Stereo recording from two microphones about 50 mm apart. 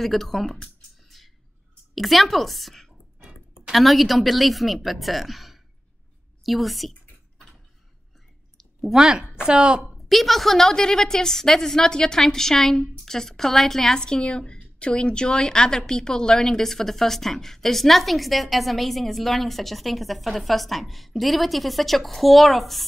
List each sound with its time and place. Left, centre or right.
0.0 s a woman's voice: centre
1.1 s a sound: centre
2.0 s a woman's voice: centre
3.2 s a sound: centre
3.7 s a woman's voice: centre
6.9 s typing: centre
8.5 s a sound: centre
9.4 s a woman's voice: centre
10.0 s a woman's voice: centre